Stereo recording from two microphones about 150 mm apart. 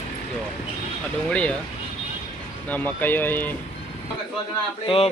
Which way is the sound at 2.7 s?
10° left (ahead or behind).